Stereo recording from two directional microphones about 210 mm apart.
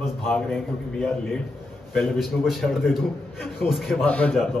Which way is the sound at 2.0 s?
Centre (ahead or behind).